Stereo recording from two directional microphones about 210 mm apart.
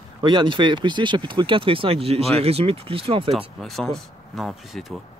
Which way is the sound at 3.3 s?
Centre (ahead or behind).